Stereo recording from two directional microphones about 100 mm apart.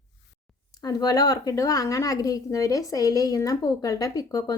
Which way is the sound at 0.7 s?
40° left (ahead or behind).